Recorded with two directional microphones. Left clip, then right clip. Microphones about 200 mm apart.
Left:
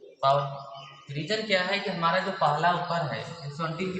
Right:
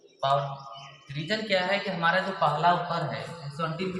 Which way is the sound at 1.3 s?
15° left (ahead or behind).